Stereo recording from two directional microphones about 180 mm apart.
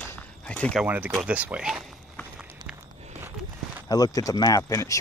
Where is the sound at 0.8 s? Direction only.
10° right (ahead or behind).